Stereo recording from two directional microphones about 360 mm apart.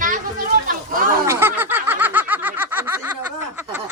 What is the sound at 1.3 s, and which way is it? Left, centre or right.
Snicker, centre.